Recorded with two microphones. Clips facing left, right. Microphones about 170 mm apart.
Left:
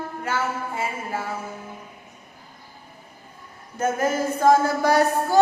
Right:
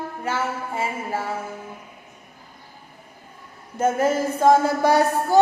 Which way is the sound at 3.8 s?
25° right (ahead or behind).